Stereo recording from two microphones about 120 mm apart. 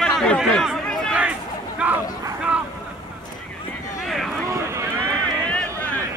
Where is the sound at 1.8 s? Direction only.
10° right (ahead or behind).